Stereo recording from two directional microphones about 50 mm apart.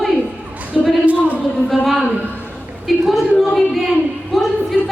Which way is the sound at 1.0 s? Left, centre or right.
Right.